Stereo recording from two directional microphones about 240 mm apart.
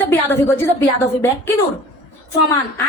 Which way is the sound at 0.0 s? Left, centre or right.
Centre.